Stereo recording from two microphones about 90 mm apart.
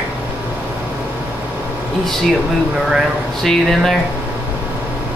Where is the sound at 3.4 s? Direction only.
5° left (ahead or behind).